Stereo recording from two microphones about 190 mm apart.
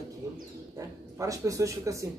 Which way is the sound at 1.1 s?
15° right (ahead or behind).